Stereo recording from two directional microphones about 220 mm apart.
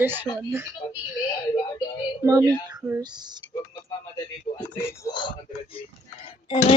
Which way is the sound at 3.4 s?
55° left (ahead or behind).